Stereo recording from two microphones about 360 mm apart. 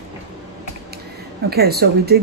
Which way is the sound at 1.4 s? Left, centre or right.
Right.